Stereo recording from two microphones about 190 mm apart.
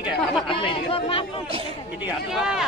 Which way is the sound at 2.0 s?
5° right (ahead or behind).